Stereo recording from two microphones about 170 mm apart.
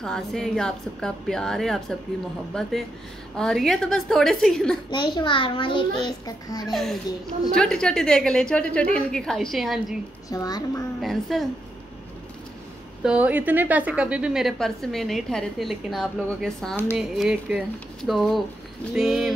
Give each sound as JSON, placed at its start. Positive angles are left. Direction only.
{"t": 0.0, "sound": "a woman's voice", "side_deg": 5}
{"t": 4.9, "sound": "a child's voice", "side_deg": 25}
{"t": 6.6, "sound": "a woman's voice", "side_deg": 0}
{"t": 10.3, "sound": "a child's voice", "side_deg": 20}
{"t": 11.0, "sound": "a woman's voice", "side_deg": 0}
{"t": 13.0, "sound": "a woman's voice", "side_deg": -5}